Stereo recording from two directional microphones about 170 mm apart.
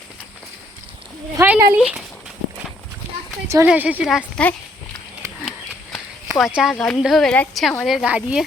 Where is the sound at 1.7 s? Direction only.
5° right (ahead or behind).